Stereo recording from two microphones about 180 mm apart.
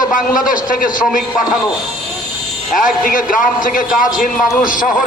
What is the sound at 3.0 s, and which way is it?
A man's voice, 50° left (ahead or behind).